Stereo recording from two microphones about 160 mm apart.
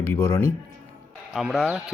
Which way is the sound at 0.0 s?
15° left (ahead or behind).